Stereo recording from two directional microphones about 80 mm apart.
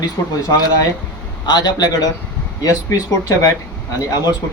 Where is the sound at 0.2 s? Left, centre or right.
Left.